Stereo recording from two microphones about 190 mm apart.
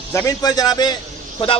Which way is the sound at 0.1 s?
20° left (ahead or behind).